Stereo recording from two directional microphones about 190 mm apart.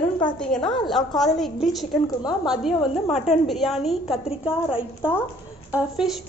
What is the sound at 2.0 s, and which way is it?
Speech, 20° left (ahead or behind).